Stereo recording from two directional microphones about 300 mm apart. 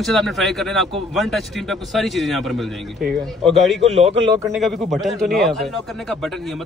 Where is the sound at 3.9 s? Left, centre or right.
Right.